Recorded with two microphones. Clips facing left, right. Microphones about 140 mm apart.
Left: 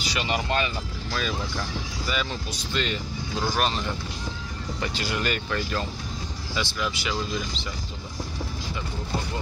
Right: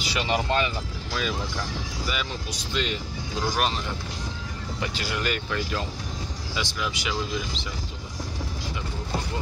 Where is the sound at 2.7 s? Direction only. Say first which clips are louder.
Even; 10° right (ahead or behind).